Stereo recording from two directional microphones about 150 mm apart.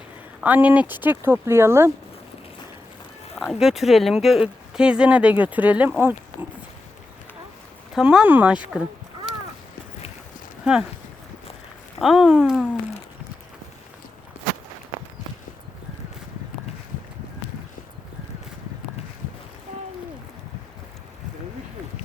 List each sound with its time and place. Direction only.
0.4 s speech: 10° right (ahead or behind)
3.3 s speech: centre (ahead or behind)
7.9 s speech: 5° right (ahead or behind)
11.9 s speech: centre (ahead or behind)